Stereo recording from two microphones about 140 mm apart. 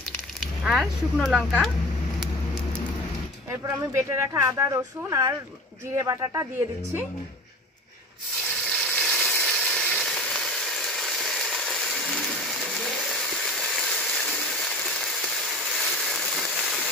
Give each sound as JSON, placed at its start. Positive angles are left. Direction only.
{"t": 0.7, "sound": "speech", "side_deg": 0}
{"t": 3.6, "sound": "speech", "side_deg": -20}
{"t": 8.5, "sound": "a sound", "side_deg": 10}